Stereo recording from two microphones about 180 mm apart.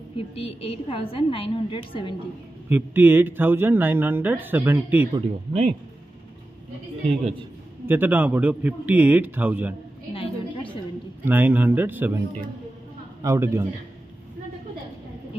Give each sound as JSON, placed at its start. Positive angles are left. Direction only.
{"t": 0.3, "sound": "a woman's voice", "side_deg": 30}
{"t": 2.7, "sound": "speech", "side_deg": -10}
{"t": 5.1, "sound": "speech", "side_deg": -30}
{"t": 7.8, "sound": "speech", "side_deg": -10}
{"t": 10.1, "sound": "a sound", "side_deg": 30}
{"t": 11.2, "sound": "speech", "side_deg": -10}
{"t": 13.2, "sound": "speech", "side_deg": -15}